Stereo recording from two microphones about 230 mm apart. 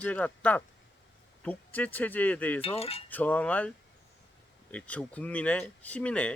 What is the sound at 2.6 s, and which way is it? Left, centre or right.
Speech, left.